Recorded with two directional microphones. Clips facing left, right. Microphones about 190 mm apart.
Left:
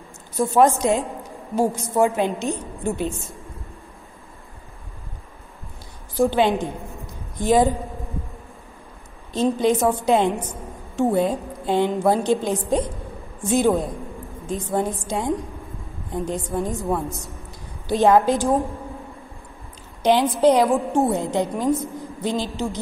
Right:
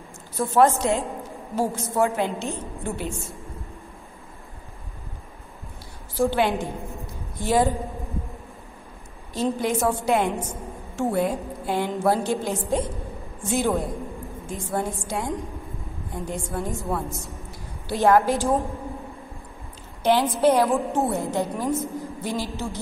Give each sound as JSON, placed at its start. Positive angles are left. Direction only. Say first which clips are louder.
{"t": 0.4, "sound": "a woman's voice", "louder": "left 2 dB", "side_deg": 15}
{"t": 6.1, "sound": "a woman's voice", "louder": "left 3 dB", "side_deg": 15}
{"t": 9.3, "sound": "a woman's voice", "louder": "left 5 dB", "side_deg": 20}
{"t": 20.0, "sound": "a woman's voice", "louder": "left 3 dB", "side_deg": 15}